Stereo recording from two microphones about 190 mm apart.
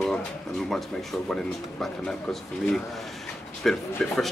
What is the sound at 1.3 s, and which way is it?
Speech, 5° left (ahead or behind).